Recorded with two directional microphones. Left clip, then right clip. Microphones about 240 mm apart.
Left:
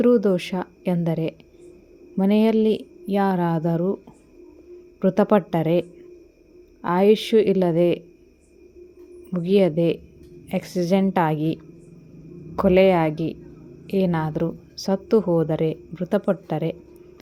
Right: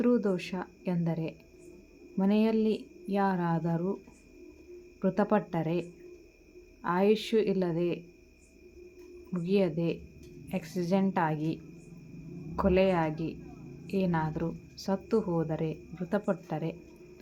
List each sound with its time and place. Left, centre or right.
0.0 s a woman's voice: left
4.9 s a woman's voice: left
6.8 s a woman's voice: left
9.3 s a woman's voice: left